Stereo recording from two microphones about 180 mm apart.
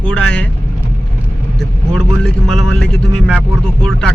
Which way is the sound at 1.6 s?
5° left (ahead or behind).